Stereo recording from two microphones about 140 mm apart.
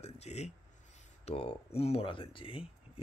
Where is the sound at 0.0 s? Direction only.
50° left (ahead or behind).